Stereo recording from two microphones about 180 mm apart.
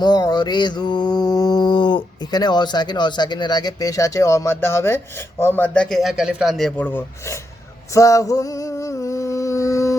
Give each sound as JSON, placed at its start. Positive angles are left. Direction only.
{"t": 0.0, "sound": "mantra", "side_deg": 20}
{"t": 5.4, "sound": "a man's voice", "side_deg": 10}
{"t": 7.9, "sound": "a sound", "side_deg": 15}